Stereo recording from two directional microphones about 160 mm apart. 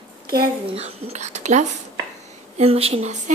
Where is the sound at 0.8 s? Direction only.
40° right (ahead or behind).